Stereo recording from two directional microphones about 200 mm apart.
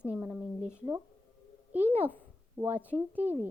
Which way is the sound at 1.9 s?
10° left (ahead or behind).